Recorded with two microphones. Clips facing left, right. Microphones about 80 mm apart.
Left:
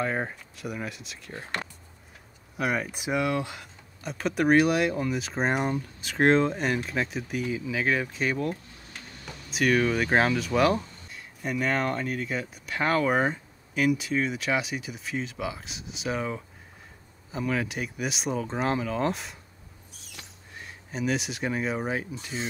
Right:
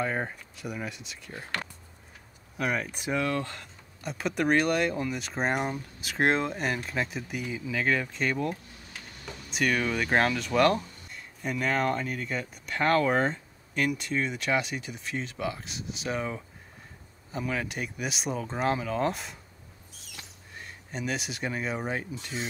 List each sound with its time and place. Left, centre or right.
0.0 s speech: centre
1.3 s speech: left
2.5 s speech: centre
4.0 s speech: centre
20.5 s speech: centre